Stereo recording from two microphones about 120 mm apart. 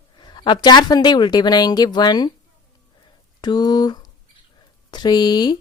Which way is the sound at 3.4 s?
35° left (ahead or behind).